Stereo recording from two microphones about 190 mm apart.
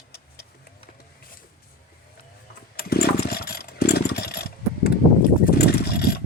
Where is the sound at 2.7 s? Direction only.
55° left (ahead or behind).